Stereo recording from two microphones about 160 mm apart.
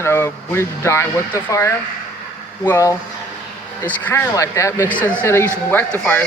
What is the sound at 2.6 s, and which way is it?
Speech, 15° left (ahead or behind).